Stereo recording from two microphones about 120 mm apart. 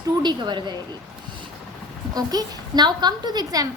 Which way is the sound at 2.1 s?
30° right (ahead or behind).